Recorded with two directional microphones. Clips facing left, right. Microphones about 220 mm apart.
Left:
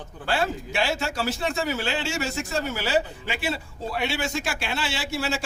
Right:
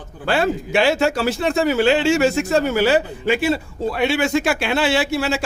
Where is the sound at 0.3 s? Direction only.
65° right (ahead or behind).